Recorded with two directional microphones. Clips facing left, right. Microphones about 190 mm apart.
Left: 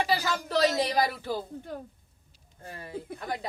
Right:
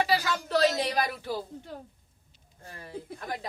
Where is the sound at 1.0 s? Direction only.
40° left (ahead or behind).